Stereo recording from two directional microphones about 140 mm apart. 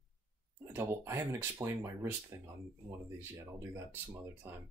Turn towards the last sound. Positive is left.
turn(degrees=-20)  # may be behind; listen again after turning